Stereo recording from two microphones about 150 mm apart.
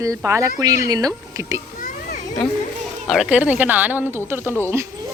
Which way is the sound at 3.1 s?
5° right (ahead or behind).